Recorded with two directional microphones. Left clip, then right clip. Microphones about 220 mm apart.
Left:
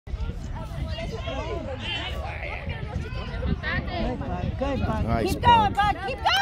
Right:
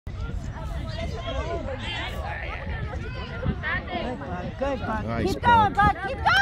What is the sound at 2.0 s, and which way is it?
Hubbub, 50° left (ahead or behind).